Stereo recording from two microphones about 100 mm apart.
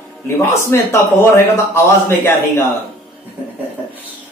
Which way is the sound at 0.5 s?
30° left (ahead or behind).